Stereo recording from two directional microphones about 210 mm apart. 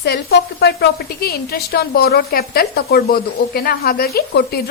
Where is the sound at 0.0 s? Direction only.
50° left (ahead or behind).